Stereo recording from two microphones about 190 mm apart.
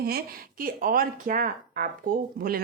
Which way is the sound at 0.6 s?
50° right (ahead or behind).